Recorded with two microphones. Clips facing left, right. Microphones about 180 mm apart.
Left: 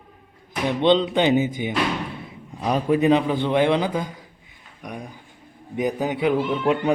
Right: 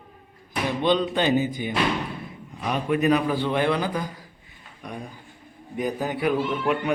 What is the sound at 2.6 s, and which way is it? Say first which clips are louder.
A man's voice: left 3 dB; 30° left (ahead or behind).